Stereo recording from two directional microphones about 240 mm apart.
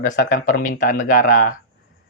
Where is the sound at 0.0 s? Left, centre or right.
Left.